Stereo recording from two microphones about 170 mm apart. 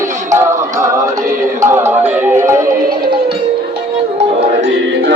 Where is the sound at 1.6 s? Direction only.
15° right (ahead or behind).